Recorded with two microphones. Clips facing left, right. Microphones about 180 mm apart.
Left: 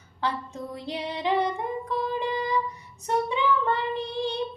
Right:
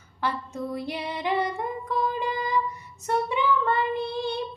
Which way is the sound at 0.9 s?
15° left (ahead or behind).